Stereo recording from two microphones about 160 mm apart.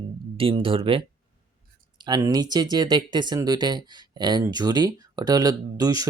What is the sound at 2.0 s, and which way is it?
Speech, 20° right (ahead or behind).